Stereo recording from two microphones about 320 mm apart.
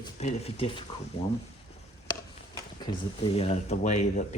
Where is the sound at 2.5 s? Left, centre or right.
Centre.